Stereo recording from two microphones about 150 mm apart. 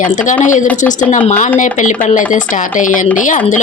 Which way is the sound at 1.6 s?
55° left (ahead or behind).